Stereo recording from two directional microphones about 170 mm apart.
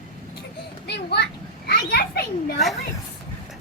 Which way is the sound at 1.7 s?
65° left (ahead or behind).